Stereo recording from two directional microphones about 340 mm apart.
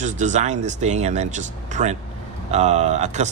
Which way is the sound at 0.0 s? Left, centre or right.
Right.